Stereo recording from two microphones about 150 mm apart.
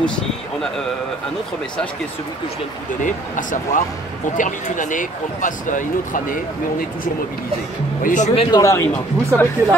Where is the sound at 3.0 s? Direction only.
60° left (ahead or behind).